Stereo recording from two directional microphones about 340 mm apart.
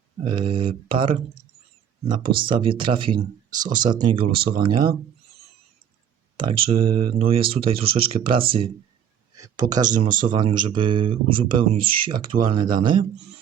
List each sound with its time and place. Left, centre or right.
0.2 s speech: centre
3.8 s speech: centre
6.3 s speech: centre